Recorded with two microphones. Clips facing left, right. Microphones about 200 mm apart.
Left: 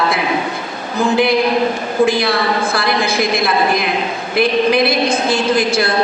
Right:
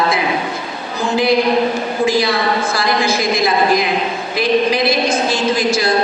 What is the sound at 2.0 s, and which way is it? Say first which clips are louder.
A woman's voice: left 2 dB; 60° left (ahead or behind).